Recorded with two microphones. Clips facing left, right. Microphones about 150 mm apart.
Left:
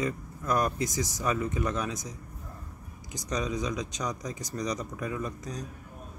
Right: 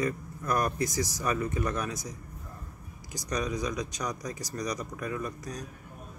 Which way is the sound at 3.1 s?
20° left (ahead or behind).